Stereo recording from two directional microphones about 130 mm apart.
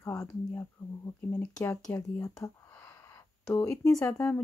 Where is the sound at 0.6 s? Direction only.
20° left (ahead or behind).